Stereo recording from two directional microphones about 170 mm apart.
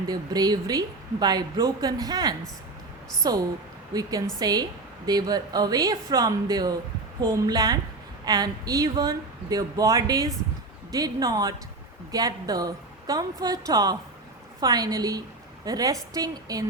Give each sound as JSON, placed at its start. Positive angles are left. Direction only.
{"t": 0.1, "sound": "a woman's voice", "side_deg": -25}